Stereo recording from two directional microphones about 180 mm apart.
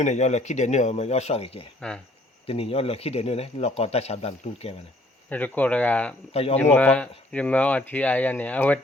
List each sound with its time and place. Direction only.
0.0 s speech: 40° left (ahead or behind)
1.8 s speech: 5° left (ahead or behind)
2.5 s speech: 30° left (ahead or behind)
5.3 s speech: 10° left (ahead or behind)
6.3 s speech: 35° left (ahead or behind)
6.6 s speech: 10° left (ahead or behind)